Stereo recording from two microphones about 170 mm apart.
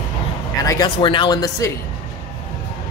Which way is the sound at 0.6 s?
20° left (ahead or behind).